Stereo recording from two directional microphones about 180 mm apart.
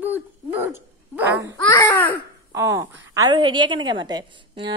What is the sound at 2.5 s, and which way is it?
A woman's voice, 15° right (ahead or behind).